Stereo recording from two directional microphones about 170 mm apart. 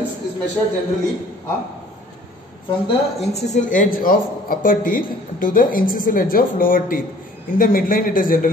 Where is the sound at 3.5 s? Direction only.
50° left (ahead or behind).